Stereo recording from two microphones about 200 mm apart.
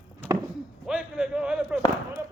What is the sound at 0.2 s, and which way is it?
Chop, 5° left (ahead or behind).